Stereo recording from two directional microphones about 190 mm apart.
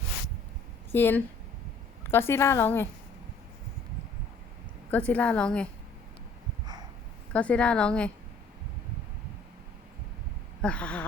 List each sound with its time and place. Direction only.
0.9 s a woman's voice: 10° left (ahead or behind)
4.9 s a woman's voice: 5° left (ahead or behind)
7.3 s a woman's voice: 5° left (ahead or behind)
10.6 s a woman's voice: 5° left (ahead or behind)